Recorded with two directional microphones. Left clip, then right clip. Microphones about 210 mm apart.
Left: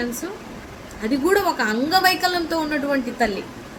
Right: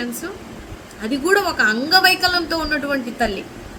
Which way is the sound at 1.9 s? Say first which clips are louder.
Right 2 dB; 10° right (ahead or behind).